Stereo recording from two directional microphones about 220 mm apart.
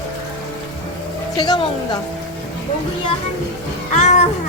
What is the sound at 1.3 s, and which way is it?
Speech, 20° left (ahead or behind).